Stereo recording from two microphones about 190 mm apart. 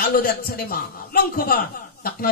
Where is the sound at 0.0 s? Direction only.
55° left (ahead or behind).